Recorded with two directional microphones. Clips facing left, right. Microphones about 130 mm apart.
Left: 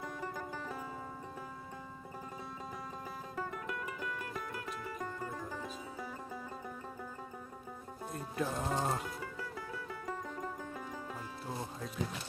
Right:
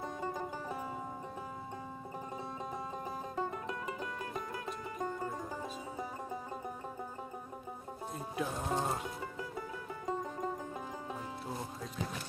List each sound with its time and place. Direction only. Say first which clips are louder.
0.0 s music: right 3 dB; 20° right (ahead or behind)
3.3 s music: right 1 dB; 25° right (ahead or behind)
8.1 s speech: left 1 dB; centre (ahead or behind)
9.0 s music: right 1 dB; 20° right (ahead or behind)
10.1 s banjo: right 6 dB; 20° right (ahead or behind)